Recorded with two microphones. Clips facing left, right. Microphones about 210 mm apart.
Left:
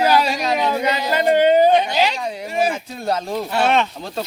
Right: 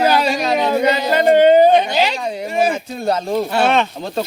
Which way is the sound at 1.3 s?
45° right (ahead or behind).